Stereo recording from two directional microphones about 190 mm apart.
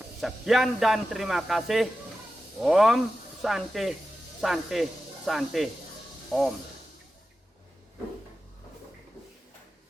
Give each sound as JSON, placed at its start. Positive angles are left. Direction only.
{"t": 0.2, "sound": "a man's voice", "side_deg": 0}